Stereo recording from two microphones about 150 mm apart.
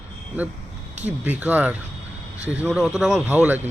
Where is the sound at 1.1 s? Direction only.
10° right (ahead or behind).